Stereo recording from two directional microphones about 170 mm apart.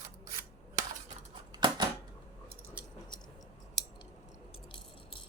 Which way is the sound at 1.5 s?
25° right (ahead or behind).